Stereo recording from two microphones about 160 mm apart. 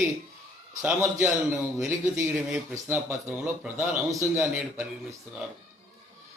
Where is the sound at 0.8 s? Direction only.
10° right (ahead or behind).